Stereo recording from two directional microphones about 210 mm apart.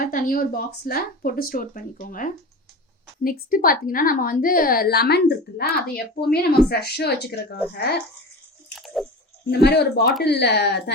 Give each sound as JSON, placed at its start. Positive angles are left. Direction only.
{"t": 0.0, "sound": "a woman's voice", "side_deg": 45}
{"t": 8.7, "sound": "drip", "side_deg": 0}
{"t": 9.5, "sound": "a woman's voice", "side_deg": 50}